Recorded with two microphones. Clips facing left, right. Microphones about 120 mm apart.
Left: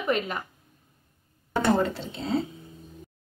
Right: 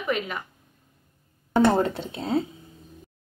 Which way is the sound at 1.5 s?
55° right (ahead or behind).